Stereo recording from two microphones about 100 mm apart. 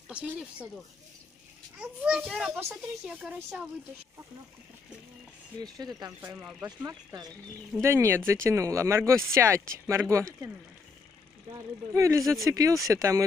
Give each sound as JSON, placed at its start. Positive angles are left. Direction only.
{"t": 0.1, "sound": "a woman's voice", "side_deg": -10}
{"t": 1.8, "sound": "a woman's voice", "side_deg": -5}
{"t": 6.2, "sound": "speech", "side_deg": -20}
{"t": 11.5, "sound": "speech", "side_deg": -30}